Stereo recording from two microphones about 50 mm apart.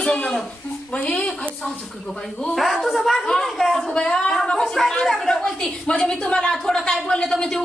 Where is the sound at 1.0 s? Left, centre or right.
Left.